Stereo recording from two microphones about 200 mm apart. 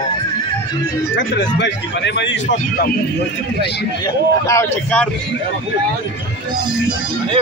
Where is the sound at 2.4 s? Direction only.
40° left (ahead or behind).